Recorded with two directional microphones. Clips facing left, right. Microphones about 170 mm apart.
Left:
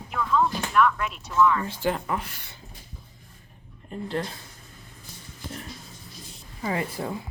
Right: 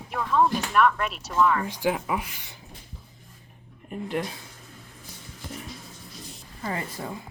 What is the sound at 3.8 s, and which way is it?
Speech, 15° right (ahead or behind).